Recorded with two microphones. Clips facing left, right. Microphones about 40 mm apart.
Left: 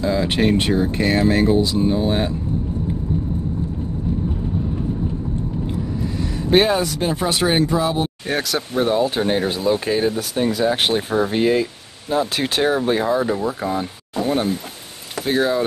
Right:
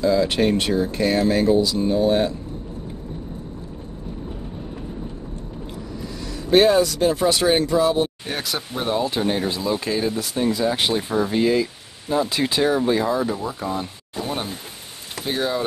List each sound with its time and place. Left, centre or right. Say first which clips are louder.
0.0 s speech: even; left
6.5 s speech: right 1 dB; left; by 9.1 s centre
9.1 s speech: left 3 dB; left
9.4 s speech: left 4 dB; left
11.0 s speech: left 2 dB; left
12.4 s speech: even; left
12.6 s speech: left 1 dB; left
13.7 s speech: left 5 dB; centre